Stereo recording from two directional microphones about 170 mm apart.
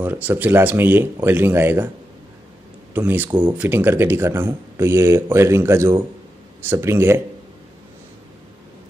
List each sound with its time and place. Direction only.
0.0 s speech: 10° right (ahead or behind)
2.9 s speech: 10° right (ahead or behind)